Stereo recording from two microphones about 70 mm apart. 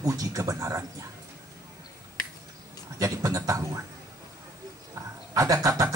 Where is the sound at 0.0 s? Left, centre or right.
Right.